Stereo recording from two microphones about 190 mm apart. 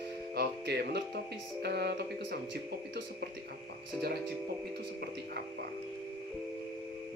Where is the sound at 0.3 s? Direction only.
60° right (ahead or behind).